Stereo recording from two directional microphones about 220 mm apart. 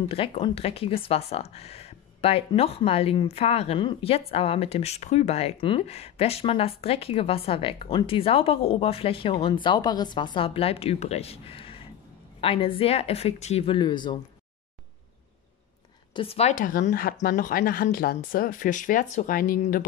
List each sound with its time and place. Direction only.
0.1 s speech: 25° left (ahead or behind)
16.1 s speech: 25° left (ahead or behind); by 19.9 s 40° left (ahead or behind)